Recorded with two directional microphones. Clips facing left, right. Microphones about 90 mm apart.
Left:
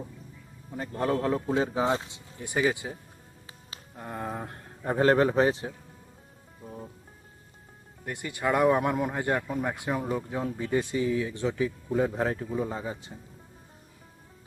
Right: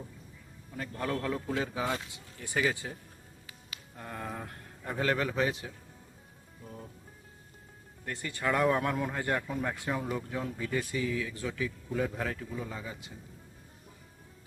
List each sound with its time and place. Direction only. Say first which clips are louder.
0.7 s a man's voice: left 6 dB; 25° left (ahead or behind)
8.0 s speech: left 3 dB; 15° left (ahead or behind); by 13.1 s 30° left (ahead or behind)